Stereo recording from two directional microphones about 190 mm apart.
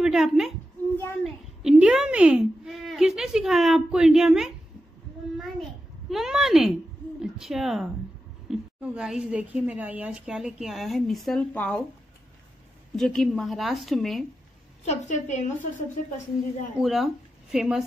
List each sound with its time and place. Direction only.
0.0 s a woman's voice: 5° right (ahead or behind)
0.9 s a sound: 10° left (ahead or behind)
1.6 s a woman's voice: 5° right (ahead or behind)
5.4 s a sound: centre (ahead or behind)
7.2 s a woman's voice: centre (ahead or behind)
12.9 s a woman's voice: centre (ahead or behind)
14.9 s a woman's voice: 40° left (ahead or behind)
16.7 s speech: centre (ahead or behind)